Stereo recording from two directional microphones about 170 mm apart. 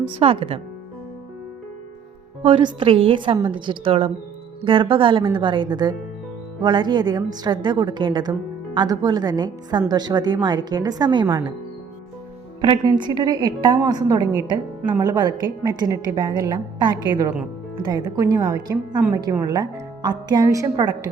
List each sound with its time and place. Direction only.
0.2 s a woman's voice: 35° right (ahead or behind)
2.4 s a woman's voice: 30° right (ahead or behind)
12.6 s a woman's voice: 30° right (ahead or behind)
14.8 s speech: 10° right (ahead or behind)
15.0 s a woman's voice: 25° right (ahead or behind)